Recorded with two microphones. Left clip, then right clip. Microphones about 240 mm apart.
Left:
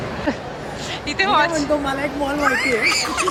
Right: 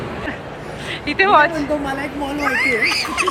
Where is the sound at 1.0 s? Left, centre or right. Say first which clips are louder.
Right 4 dB; centre.